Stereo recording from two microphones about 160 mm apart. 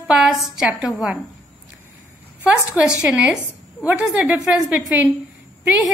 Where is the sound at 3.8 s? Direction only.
10° right (ahead or behind).